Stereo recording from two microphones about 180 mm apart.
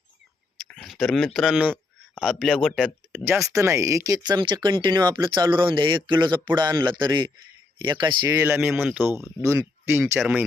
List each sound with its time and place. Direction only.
0.7 s speech: centre (ahead or behind)
3.2 s speech: 15° right (ahead or behind)
8.4 s speech: 10° right (ahead or behind)